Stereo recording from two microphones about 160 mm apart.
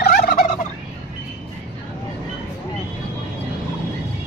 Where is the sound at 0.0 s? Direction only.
70° left (ahead or behind).